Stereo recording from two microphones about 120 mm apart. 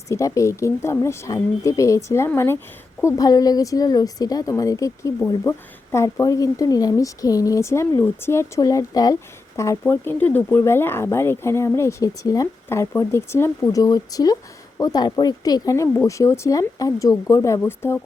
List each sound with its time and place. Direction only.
0.1 s speech: 25° left (ahead or behind)